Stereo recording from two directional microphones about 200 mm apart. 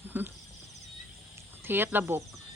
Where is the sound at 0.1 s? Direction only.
10° right (ahead or behind).